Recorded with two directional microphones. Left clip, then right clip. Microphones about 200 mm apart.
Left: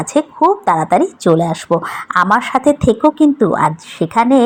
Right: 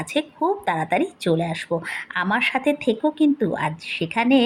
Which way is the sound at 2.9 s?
15° left (ahead or behind).